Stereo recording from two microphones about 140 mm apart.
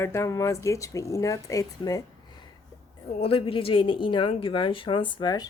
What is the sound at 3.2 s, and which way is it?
A woman's voice, 40° left (ahead or behind).